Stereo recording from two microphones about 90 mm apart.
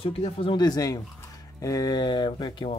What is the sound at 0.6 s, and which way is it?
Speech, 45° left (ahead or behind).